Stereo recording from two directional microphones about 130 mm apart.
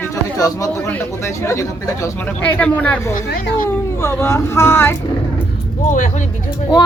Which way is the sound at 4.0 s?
20° left (ahead or behind).